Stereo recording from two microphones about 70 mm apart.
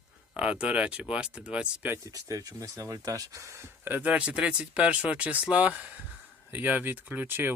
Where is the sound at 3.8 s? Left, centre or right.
Right.